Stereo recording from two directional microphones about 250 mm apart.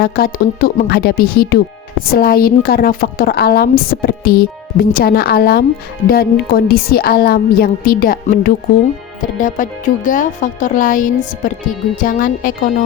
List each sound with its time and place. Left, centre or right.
0.0 s a woman's voice: left